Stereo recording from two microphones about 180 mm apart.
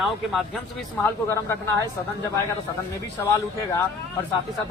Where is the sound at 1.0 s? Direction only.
15° left (ahead or behind).